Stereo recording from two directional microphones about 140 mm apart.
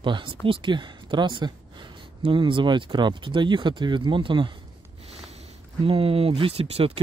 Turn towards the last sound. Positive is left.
turn(degrees=-45)  # may be behind; listen again after turning